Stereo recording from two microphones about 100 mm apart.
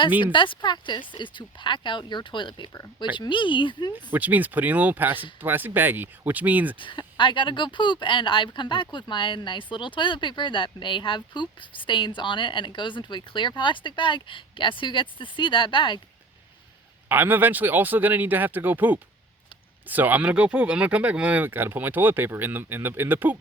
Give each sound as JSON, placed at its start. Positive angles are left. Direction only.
{"t": 0.2, "sound": "speech", "side_deg": 55}
{"t": 4.1, "sound": "speech", "side_deg": -15}
{"t": 6.7, "sound": "speech", "side_deg": 55}
{"t": 17.1, "sound": "speech", "side_deg": -20}